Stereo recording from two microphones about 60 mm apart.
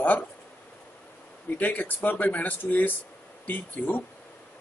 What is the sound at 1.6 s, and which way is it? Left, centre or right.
Speech, left.